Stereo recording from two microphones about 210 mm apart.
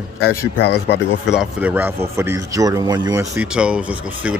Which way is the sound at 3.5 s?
5° right (ahead or behind).